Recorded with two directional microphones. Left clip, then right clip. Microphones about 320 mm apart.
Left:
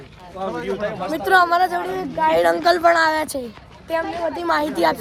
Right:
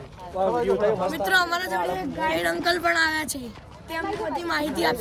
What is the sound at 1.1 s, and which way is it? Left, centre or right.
A woman's voice, centre.